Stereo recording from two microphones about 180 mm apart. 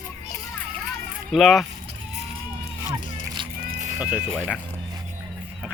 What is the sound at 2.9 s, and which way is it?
Music, 25° right (ahead or behind).